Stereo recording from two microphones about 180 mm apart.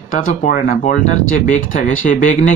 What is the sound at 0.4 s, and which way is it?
Speech, 50° left (ahead or behind).